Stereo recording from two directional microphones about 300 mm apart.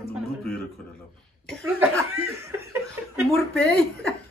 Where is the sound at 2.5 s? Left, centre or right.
Centre.